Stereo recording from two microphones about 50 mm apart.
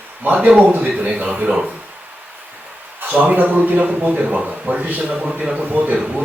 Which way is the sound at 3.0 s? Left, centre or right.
Right.